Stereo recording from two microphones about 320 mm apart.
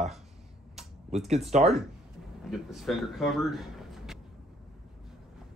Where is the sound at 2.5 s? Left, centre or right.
Centre.